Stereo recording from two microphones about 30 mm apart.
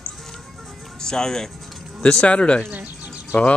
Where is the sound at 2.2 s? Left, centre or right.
Left.